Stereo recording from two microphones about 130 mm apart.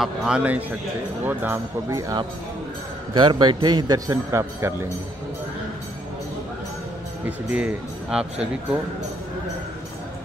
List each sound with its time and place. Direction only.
0.0 s a man's voice: 5° right (ahead or behind); by 4.7 s 20° right (ahead or behind)
7.2 s speech: 10° right (ahead or behind)